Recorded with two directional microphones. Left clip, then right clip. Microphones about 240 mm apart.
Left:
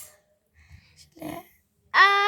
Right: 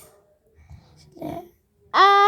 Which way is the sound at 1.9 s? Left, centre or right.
Centre.